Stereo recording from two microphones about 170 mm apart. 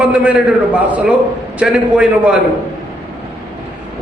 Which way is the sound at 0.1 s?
5° right (ahead or behind).